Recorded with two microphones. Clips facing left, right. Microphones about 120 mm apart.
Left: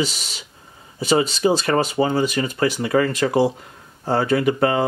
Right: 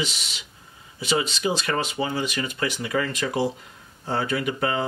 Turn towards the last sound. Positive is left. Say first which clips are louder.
# left 7 dB
turn(degrees=45)  # may be behind; listen again after turning